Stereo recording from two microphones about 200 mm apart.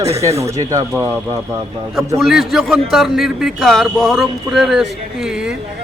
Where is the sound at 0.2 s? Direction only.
15° right (ahead or behind).